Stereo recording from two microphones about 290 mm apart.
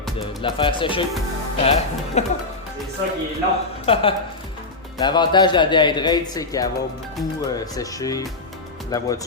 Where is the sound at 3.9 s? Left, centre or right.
Centre.